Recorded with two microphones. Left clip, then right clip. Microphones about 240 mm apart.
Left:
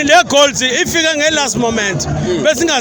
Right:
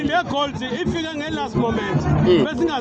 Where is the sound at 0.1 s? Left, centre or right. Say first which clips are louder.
Left 15 dB; left.